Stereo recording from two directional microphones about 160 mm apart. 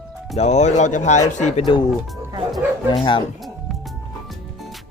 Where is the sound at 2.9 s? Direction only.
30° left (ahead or behind).